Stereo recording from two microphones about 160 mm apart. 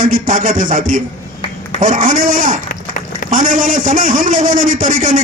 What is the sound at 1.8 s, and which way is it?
A man's voice, 55° right (ahead or behind).